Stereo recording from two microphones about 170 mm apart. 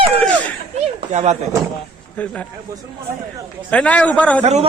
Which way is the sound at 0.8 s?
40° right (ahead or behind).